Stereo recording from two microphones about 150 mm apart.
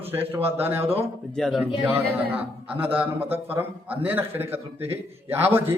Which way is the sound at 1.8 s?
10° right (ahead or behind).